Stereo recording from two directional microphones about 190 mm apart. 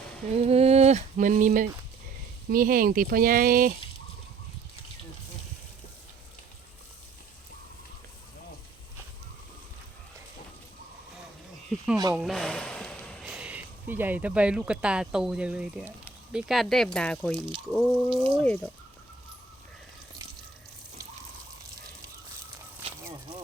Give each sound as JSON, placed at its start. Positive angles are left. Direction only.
{"t": 0.3, "sound": "a sound", "side_deg": -30}
{"t": 2.5, "sound": "speech", "side_deg": -50}
{"t": 11.7, "sound": "speech", "side_deg": 0}